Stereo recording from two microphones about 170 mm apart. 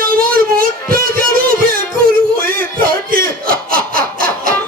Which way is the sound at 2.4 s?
60° right (ahead or behind).